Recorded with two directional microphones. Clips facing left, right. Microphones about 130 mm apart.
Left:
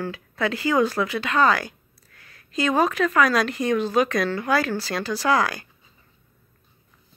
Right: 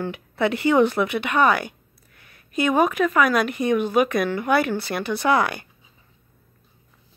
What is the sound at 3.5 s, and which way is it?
Speech, 20° right (ahead or behind).